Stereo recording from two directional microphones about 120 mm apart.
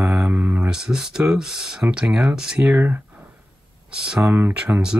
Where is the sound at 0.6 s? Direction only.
5° right (ahead or behind).